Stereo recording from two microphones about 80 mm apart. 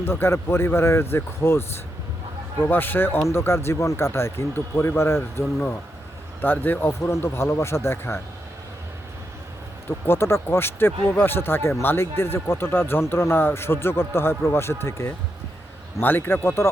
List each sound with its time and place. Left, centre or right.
0.0 s a man's voice: left
6.4 s a man's voice: left
10.1 s a man's voice: left